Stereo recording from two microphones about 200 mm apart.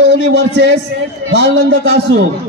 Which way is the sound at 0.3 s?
60° right (ahead or behind).